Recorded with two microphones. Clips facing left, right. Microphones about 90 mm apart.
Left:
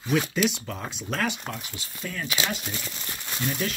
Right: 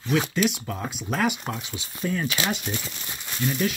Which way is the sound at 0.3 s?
Centre (ahead or behind).